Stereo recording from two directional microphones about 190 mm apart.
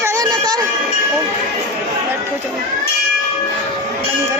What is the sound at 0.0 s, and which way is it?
Music, 20° right (ahead or behind).